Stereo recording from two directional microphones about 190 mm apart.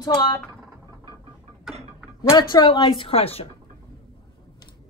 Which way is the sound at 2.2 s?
25° left (ahead or behind).